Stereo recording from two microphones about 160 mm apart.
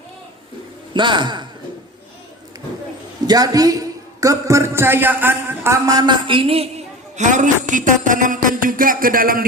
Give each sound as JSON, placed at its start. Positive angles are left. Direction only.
{"t": 0.9, "sound": "speech", "side_deg": -30}
{"t": 3.2, "sound": "a man's voice", "side_deg": -25}